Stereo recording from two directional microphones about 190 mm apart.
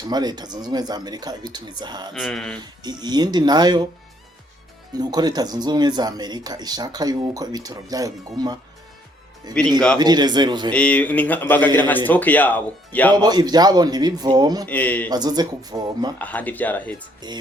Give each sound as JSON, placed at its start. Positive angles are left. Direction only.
{"t": 0.0, "sound": "speech", "side_deg": -20}
{"t": 2.1, "sound": "speech", "side_deg": 0}
{"t": 2.6, "sound": "speech", "side_deg": -20}
{"t": 4.9, "sound": "speech", "side_deg": -20}
{"t": 10.7, "sound": "speech", "side_deg": 5}
{"t": 13.1, "sound": "speech", "side_deg": -20}
{"t": 14.7, "sound": "speech", "side_deg": 10}
{"t": 15.1, "sound": "speech", "side_deg": -20}
{"t": 16.1, "sound": "speech", "side_deg": 10}
{"t": 17.2, "sound": "speech", "side_deg": -20}